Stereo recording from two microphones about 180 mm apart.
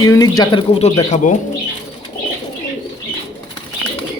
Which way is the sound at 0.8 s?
35° left (ahead or behind).